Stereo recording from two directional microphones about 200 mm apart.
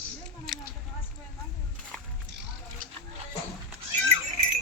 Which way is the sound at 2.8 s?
45° right (ahead or behind).